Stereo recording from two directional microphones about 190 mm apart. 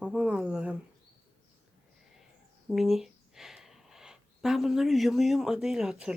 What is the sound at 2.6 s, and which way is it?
Speech, centre (ahead or behind).